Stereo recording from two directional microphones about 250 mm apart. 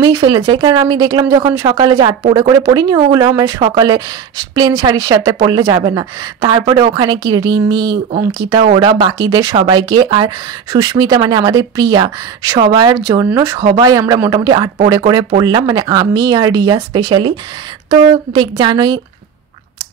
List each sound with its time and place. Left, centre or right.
0.0 s speech: centre